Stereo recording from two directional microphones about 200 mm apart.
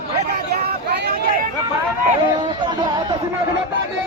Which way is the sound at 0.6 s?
55° right (ahead or behind).